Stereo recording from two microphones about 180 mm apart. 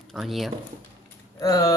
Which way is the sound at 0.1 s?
Centre (ahead or behind).